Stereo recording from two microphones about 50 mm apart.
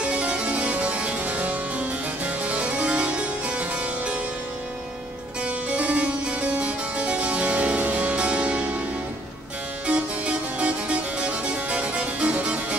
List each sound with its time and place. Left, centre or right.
0.0 s music: right
5.4 s harpsichord: right
9.8 s music: right